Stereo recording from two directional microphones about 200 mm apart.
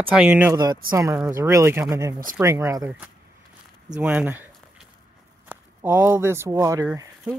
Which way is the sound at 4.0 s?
5° right (ahead or behind).